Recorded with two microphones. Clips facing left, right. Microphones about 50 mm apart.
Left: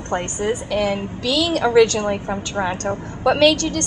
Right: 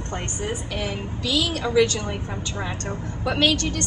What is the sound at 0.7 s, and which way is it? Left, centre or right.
A woman's voice, left.